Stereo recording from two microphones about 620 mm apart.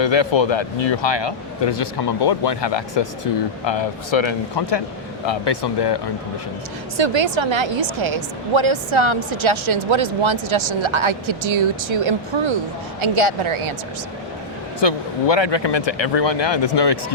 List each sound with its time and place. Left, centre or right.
0.0 s speech: left
6.9 s a woman's voice: right
14.8 s speech: left